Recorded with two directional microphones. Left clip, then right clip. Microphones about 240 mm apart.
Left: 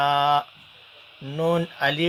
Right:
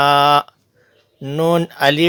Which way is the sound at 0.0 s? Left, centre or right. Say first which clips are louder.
Right 8 dB; right.